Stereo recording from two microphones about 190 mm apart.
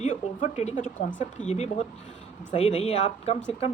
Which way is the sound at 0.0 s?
40° left (ahead or behind).